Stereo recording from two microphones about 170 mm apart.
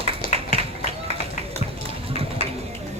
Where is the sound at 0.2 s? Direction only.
60° left (ahead or behind).